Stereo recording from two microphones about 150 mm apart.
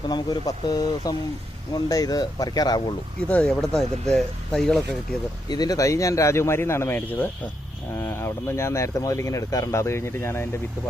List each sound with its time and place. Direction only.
0.1 s speech: 30° left (ahead or behind)
3.2 s speech: 5° left (ahead or behind)
5.5 s speech: 25° left (ahead or behind)